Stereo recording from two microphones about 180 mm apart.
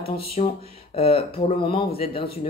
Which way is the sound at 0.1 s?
35° left (ahead or behind).